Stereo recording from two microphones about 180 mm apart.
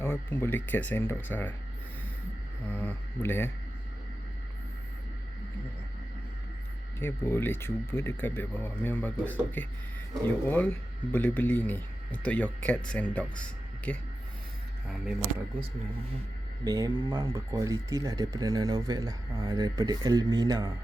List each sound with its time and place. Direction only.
0.0 s speech: 10° left (ahead or behind)
2.6 s speech: 10° left (ahead or behind)
7.0 s speech: 15° left (ahead or behind); by 15.1 s 5° right (ahead or behind)
16.6 s speech: 20° right (ahead or behind)